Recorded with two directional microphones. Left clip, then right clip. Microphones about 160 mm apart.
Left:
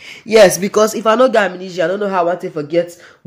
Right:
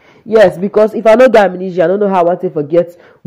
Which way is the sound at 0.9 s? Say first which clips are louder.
Right 6 dB; 20° right (ahead or behind).